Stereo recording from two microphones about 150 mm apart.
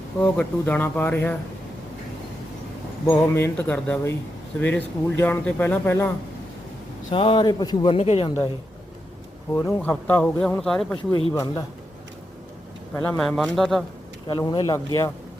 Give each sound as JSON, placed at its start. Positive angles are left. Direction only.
{"t": 0.2, "sound": "speech", "side_deg": 10}
{"t": 3.1, "sound": "speech", "side_deg": 15}
{"t": 7.1, "sound": "speech", "side_deg": 35}
{"t": 7.9, "sound": "speech", "side_deg": 40}
{"t": 9.6, "sound": "speech", "side_deg": 20}
{"t": 10.9, "sound": "speech", "side_deg": 30}
{"t": 12.9, "sound": "speech", "side_deg": 10}
{"t": 14.3, "sound": "speech", "side_deg": 30}